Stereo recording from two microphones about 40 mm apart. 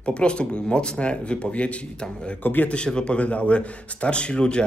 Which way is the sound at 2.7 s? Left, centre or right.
Left.